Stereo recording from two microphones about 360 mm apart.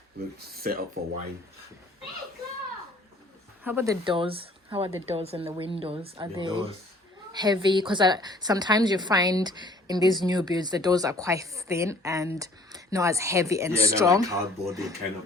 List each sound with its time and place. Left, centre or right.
0.6 s speech: right
3.6 s a woman's voice: centre